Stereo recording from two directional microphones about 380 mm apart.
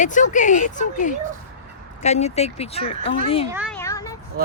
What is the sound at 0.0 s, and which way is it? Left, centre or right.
Speech, centre.